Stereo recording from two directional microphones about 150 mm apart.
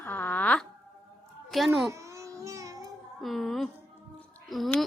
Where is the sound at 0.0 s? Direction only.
10° left (ahead or behind).